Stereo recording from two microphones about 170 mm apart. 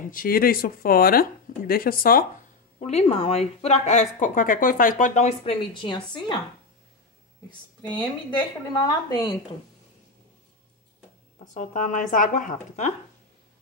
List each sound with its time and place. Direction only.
0.1 s speech: 55° left (ahead or behind)
2.8 s speech: 40° left (ahead or behind)
8.4 s a woman's voice: 25° left (ahead or behind)
11.5 s a woman's voice: 50° left (ahead or behind)